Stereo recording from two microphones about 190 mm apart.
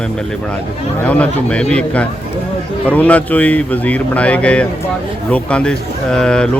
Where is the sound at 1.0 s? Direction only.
5° left (ahead or behind).